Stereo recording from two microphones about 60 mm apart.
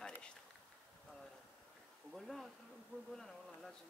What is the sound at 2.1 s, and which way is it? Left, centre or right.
Speech, centre.